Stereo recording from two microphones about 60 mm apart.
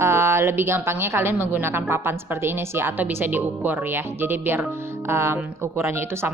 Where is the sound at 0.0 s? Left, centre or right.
Right.